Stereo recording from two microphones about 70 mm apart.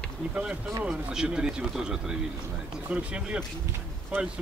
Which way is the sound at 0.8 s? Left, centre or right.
Centre.